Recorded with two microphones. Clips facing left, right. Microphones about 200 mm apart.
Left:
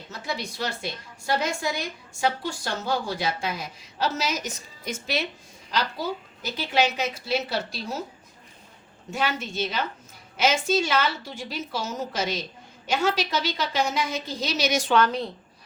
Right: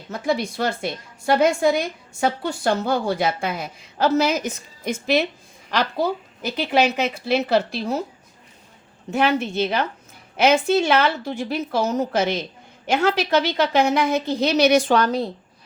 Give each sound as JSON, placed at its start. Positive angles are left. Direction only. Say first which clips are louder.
{"t": 0.1, "sound": "a woman's voice", "louder": "right 10 dB", "side_deg": -55}
{"t": 9.0, "sound": "a woman's voice", "louder": "right 8 dB", "side_deg": -60}
{"t": 14.9, "sound": "speech", "louder": "right 3 dB", "side_deg": -35}